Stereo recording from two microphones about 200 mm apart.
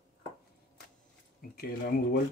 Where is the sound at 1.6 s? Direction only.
50° left (ahead or behind).